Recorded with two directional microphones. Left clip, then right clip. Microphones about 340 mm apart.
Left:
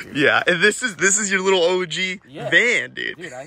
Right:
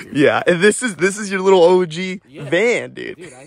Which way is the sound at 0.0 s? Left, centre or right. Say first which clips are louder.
Right 2 dB; centre.